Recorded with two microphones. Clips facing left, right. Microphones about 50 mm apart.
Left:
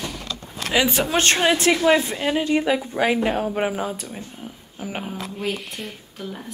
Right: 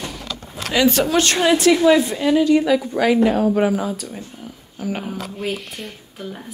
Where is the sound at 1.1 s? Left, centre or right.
Left.